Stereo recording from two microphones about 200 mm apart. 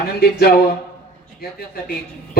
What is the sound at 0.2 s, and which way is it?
Speech, 50° left (ahead or behind).